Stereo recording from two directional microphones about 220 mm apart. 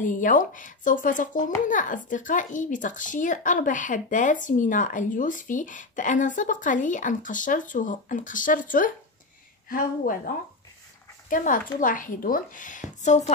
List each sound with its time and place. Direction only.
0.0 s speech: 35° left (ahead or behind)